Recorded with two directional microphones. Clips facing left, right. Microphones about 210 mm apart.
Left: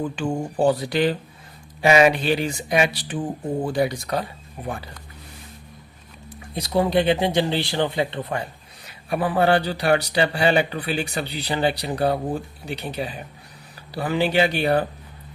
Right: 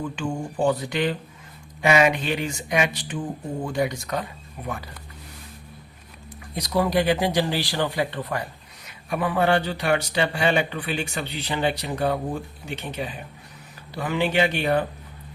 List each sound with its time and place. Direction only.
0.0 s speech: 35° left (ahead or behind)
6.5 s speech: 25° left (ahead or behind)